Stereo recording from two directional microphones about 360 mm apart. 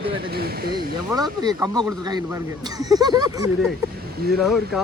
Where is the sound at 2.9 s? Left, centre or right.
Centre.